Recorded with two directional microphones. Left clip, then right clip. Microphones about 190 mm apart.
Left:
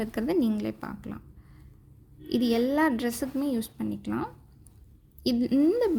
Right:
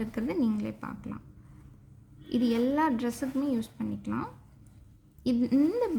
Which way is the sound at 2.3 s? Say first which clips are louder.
Left 2 dB; 35° left (ahead or behind).